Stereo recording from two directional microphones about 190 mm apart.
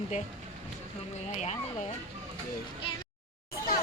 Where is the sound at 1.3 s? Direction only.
35° left (ahead or behind).